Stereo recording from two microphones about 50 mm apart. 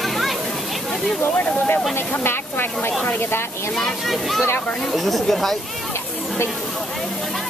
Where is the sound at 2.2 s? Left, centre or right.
Left.